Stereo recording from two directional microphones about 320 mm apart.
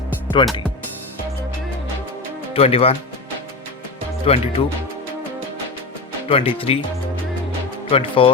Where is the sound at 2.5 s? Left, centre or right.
Centre.